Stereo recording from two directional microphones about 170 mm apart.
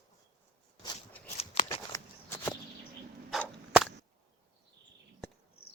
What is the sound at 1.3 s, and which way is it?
Shuffling cards, 35° left (ahead or behind).